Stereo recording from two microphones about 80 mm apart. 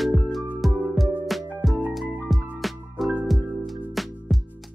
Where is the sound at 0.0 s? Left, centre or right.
Centre.